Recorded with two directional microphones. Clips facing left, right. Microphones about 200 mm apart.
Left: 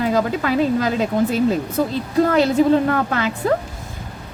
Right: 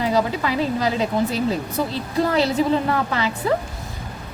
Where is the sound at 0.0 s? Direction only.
50° left (ahead or behind).